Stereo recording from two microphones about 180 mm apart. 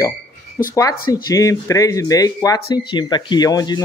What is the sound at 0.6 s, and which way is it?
Speech, 15° left (ahead or behind).